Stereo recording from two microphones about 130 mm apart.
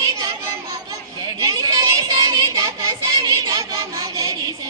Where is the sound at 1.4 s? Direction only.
25° right (ahead or behind).